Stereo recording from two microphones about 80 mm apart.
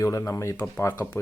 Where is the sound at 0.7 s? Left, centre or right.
Left.